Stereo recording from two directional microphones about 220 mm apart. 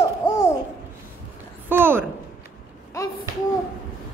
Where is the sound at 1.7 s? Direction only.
10° right (ahead or behind).